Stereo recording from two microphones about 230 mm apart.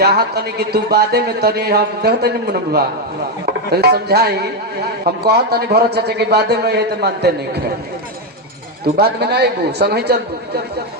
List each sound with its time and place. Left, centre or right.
0.0 s speech: right
8.8 s speech: right